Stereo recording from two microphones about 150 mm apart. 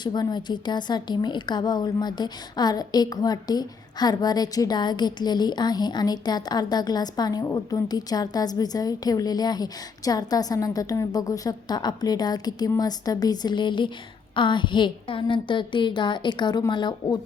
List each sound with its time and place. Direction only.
0.0 s a woman's voice: 30° left (ahead or behind)